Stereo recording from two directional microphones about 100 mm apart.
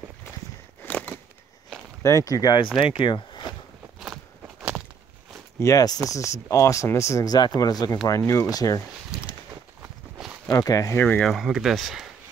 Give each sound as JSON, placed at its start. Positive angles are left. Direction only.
{"t": 0.8, "sound": "a sound", "side_deg": 15}
{"t": 2.0, "sound": "speech", "side_deg": 35}
{"t": 3.0, "sound": "speech", "side_deg": 55}
{"t": 4.0, "sound": "walk", "side_deg": -5}
{"t": 5.6, "sound": "speech", "side_deg": 35}
{"t": 7.2, "sound": "speech", "side_deg": 45}
{"t": 9.1, "sound": "a sound", "side_deg": -5}
{"t": 10.1, "sound": "walk", "side_deg": -5}
{"t": 10.5, "sound": "speech", "side_deg": 35}
{"t": 11.0, "sound": "speech", "side_deg": 15}
{"t": 11.2, "sound": "speech", "side_deg": 0}